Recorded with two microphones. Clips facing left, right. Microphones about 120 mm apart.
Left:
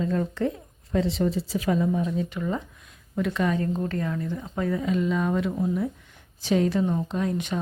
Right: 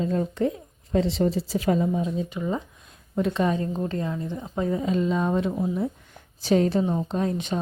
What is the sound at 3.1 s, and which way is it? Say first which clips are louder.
Speech: right 1 dB; 30° right (ahead or behind).